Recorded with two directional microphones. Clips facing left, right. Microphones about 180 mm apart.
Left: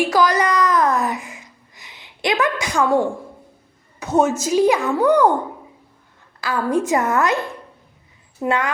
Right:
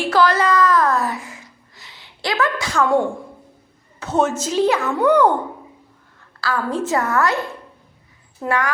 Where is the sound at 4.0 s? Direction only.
10° left (ahead or behind).